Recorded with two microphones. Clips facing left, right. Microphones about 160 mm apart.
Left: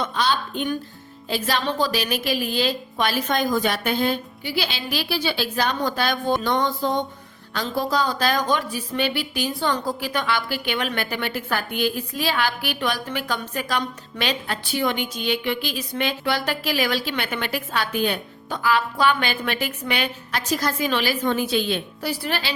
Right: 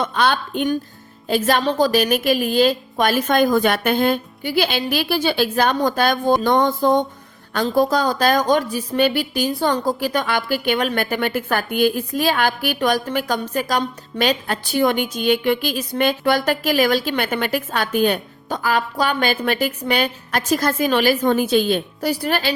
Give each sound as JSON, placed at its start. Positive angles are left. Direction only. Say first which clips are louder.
{"t": 0.0, "sound": "a woman's voice", "louder": "right 4 dB", "side_deg": -55}
{"t": 1.3, "sound": "a woman's voice", "louder": "right 6 dB", "side_deg": -50}